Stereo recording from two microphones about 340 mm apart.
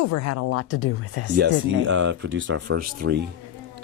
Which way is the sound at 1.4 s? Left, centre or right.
Right.